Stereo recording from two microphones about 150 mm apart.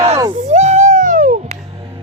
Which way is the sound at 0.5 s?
50° right (ahead or behind).